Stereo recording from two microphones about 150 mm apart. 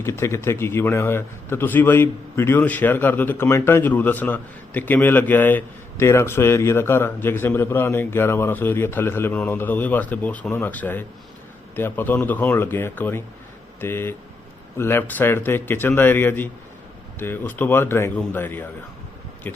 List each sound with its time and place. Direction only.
0.0 s a man's voice: 20° left (ahead or behind)